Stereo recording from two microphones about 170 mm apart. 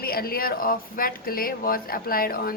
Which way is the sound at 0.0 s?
60° left (ahead or behind).